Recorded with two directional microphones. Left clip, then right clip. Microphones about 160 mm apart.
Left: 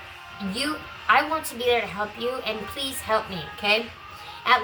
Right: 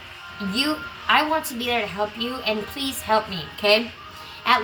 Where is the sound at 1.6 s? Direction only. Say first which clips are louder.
Even; 20° left (ahead or behind).